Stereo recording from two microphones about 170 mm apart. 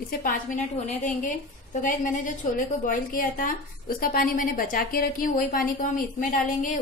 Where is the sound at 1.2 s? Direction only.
50° left (ahead or behind).